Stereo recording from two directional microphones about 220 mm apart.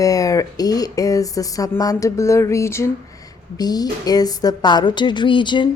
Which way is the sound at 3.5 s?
15° left (ahead or behind).